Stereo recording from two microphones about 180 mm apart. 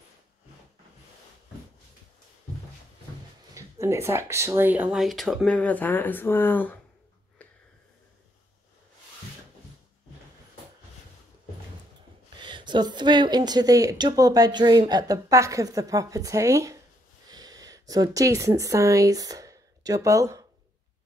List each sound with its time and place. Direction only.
3.5 s speech: 15° right (ahead or behind); by 6.8 s 10° left (ahead or behind)
12.4 s speech: 25° right (ahead or behind)